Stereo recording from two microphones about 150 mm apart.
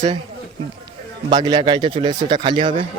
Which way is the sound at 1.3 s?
30° right (ahead or behind).